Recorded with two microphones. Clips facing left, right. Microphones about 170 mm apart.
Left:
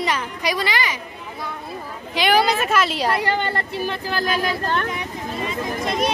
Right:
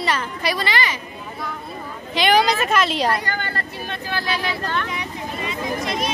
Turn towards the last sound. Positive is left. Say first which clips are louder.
# left 1 dB
turn(degrees=50)  # may be behind; listen again after turning